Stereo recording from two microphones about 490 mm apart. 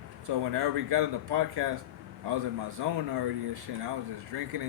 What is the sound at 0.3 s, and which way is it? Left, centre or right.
Speech, right.